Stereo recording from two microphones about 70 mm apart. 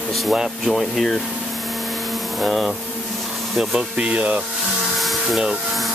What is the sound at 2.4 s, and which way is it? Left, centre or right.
Speech, centre.